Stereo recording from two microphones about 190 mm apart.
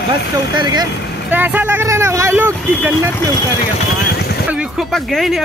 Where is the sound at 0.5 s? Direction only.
25° right (ahead or behind).